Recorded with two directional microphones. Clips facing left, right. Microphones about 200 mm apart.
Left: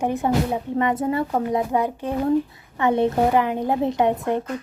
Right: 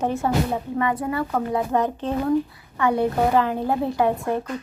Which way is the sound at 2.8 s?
20° left (ahead or behind).